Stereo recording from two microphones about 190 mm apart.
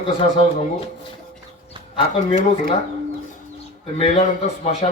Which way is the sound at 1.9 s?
30° left (ahead or behind).